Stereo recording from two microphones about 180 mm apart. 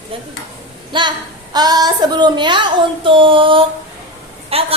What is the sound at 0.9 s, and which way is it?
A woman's voice, 25° right (ahead or behind).